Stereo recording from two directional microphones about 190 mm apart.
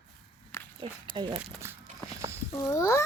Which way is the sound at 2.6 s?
15° left (ahead or behind).